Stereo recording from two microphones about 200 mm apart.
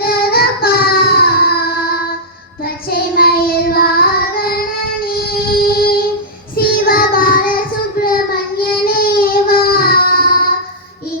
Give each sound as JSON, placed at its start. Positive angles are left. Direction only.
{"t": 0.0, "sound": "child singing", "side_deg": 50}
{"t": 5.0, "sound": "a sound", "side_deg": 50}
{"t": 6.6, "sound": "child singing", "side_deg": 45}
{"t": 8.6, "sound": "baby cry", "side_deg": 50}